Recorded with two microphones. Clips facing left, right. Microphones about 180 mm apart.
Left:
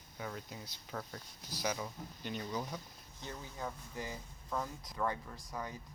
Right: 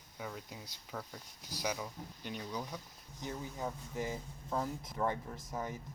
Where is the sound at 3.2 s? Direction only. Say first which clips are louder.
Right 4 dB; 15° right (ahead or behind).